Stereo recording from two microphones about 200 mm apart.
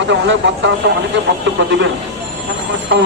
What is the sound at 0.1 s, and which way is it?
Speech, 65° right (ahead or behind).